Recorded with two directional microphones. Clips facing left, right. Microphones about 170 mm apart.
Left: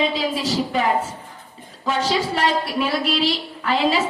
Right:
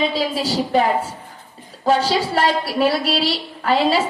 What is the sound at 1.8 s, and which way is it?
A woman's voice, 40° right (ahead or behind).